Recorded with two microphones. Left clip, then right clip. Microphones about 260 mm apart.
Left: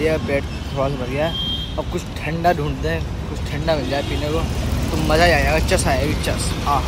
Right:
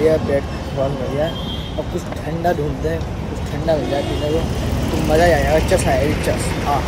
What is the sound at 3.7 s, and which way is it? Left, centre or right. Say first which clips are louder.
Speech: right 4 dB; centre.